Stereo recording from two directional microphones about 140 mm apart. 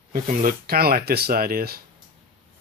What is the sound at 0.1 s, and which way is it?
Speech, 85° right.